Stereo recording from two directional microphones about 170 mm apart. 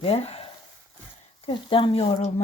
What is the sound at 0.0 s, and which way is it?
Speech, 35° left (ahead or behind).